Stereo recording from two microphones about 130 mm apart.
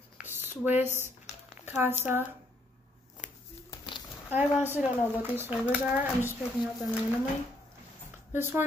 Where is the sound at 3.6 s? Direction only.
35° left (ahead or behind).